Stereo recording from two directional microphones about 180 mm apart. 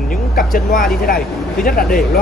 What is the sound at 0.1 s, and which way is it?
Vehicle, 55° left (ahead or behind).